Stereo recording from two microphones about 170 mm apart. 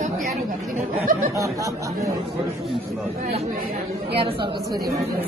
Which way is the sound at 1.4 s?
20° right (ahead or behind).